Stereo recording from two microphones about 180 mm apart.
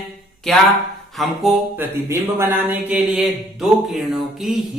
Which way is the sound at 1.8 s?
15° right (ahead or behind).